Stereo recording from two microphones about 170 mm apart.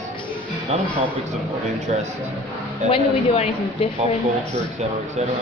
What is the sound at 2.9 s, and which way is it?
Speech, 35° left (ahead or behind).